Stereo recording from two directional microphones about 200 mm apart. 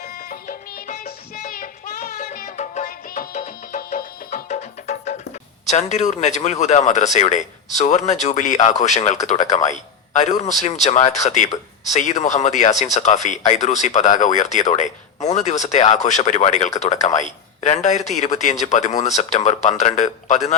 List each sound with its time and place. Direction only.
0.3 s music: 45° left (ahead or behind)
5.7 s speech: 35° left (ahead or behind)